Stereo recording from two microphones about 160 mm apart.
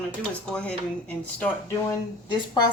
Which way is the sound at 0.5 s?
5° left (ahead or behind).